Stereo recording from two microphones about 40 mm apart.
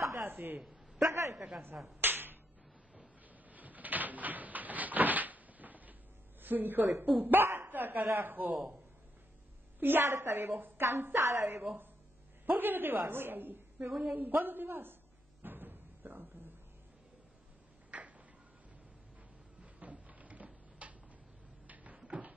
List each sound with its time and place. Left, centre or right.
0.3 s a woman's voice: right
0.6 s a man's voice: centre
2.0 s a sound: right
3.4 s door: right
6.4 s a woman's voice: right
7.6 s speech: right
9.8 s a woman's voice: right
12.4 s a woman's voice: right
13.8 s a woman's voice: centre
14.1 s a woman's voice: right
15.4 s a sound: right
17.9 s a sound: right
19.6 s a sound: right
21.6 s cupboard open or close: right